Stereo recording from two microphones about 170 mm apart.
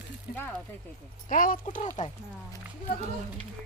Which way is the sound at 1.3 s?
55° left (ahead or behind).